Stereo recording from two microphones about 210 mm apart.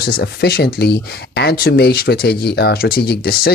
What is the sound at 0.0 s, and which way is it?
Speech, 50° left (ahead or behind).